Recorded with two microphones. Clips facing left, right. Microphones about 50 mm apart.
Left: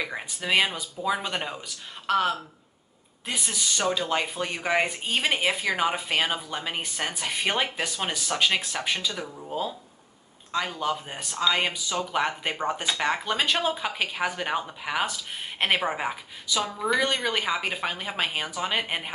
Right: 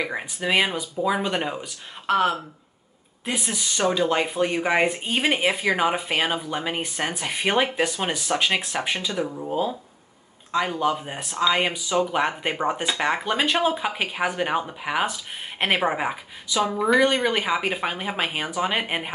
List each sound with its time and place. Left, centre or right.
0.0 s speech: centre